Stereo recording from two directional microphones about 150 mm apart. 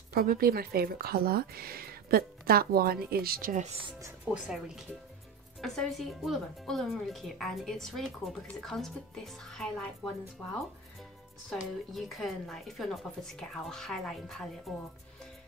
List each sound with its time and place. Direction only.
0.1 s speech: 80° right
4.3 s speech: 5° right (ahead or behind)
11.9 s speech: centre (ahead or behind)